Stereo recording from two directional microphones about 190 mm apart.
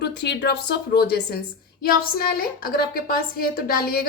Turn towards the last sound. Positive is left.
turn(degrees=50)  # may be behind; listen again after turning